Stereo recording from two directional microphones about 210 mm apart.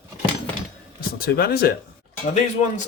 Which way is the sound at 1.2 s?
50° left (ahead or behind).